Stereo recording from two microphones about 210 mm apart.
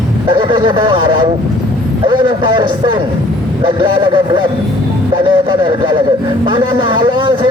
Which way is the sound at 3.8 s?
25° right (ahead or behind).